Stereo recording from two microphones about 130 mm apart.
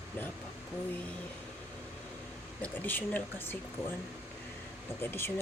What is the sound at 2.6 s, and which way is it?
Speech, 15° left (ahead or behind).